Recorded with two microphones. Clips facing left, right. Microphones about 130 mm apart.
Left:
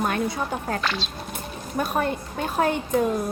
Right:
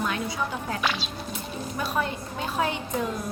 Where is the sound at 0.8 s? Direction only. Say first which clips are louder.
Even; 5° right (ahead or behind).